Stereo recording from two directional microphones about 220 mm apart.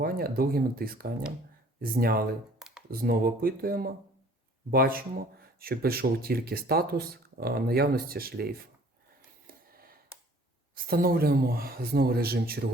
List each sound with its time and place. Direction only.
0.0 s speech: 40° right (ahead or behind)
2.6 s computer keyboard: 5° right (ahead or behind)
3.0 s speech: 40° right (ahead or behind)
10.8 s speech: 45° right (ahead or behind)